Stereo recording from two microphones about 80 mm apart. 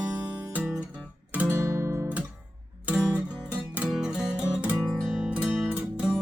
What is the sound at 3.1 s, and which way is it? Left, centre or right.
Music, centre.